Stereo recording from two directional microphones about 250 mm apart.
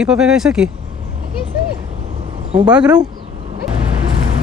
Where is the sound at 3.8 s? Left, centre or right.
Right.